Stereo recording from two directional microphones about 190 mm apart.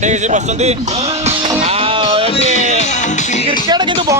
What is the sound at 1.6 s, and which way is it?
Music, 30° right (ahead or behind).